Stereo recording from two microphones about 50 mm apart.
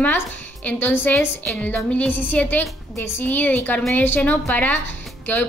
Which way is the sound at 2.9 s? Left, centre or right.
Left.